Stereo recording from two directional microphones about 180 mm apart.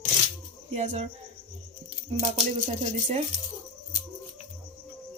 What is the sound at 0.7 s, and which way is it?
Speech, 40° right (ahead or behind).